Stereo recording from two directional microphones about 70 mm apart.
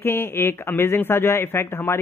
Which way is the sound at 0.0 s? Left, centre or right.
Left.